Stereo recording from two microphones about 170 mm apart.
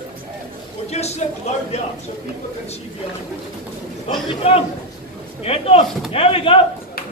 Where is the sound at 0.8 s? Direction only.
40° left (ahead or behind).